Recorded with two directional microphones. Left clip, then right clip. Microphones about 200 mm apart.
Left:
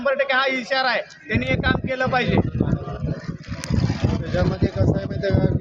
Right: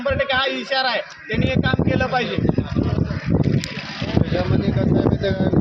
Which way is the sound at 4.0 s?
50° left (ahead or behind).